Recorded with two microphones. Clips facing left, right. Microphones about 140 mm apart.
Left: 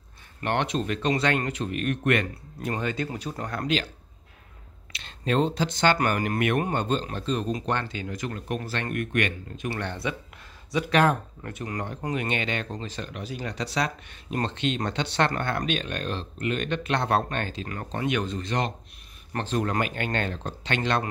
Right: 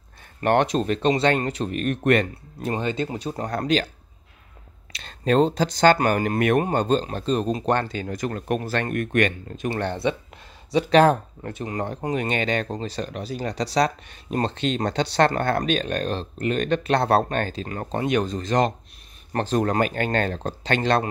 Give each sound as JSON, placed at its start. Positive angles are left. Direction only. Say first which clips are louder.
{"t": 0.4, "sound": "speech", "louder": "right 6 dB", "side_deg": -45}
{"t": 2.7, "sound": "speech", "louder": "right 4 dB", "side_deg": -25}
{"t": 4.9, "sound": "speech", "louder": "right 5 dB", "side_deg": -40}